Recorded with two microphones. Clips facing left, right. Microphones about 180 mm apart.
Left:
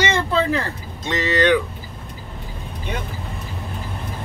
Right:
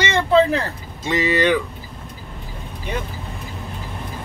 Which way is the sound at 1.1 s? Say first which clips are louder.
Even; 10° right (ahead or behind).